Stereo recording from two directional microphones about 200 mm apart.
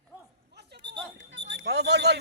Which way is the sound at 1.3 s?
60° right (ahead or behind).